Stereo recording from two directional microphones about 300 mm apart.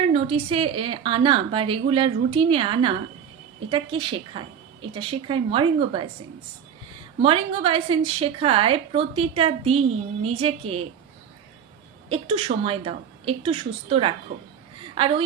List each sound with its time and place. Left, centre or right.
0.0 s a woman's voice: centre
7.2 s a woman's voice: centre
12.0 s a woman's voice: centre
14.3 s a woman's voice: right
14.9 s a woman's voice: centre